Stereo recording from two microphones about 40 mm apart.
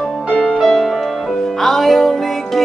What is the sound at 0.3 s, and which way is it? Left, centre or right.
Music, left.